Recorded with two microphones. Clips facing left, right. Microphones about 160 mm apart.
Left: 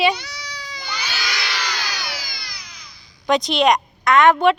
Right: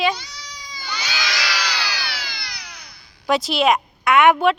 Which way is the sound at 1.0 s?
90° right.